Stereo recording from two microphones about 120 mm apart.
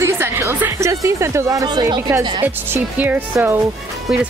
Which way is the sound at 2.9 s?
15° right (ahead or behind).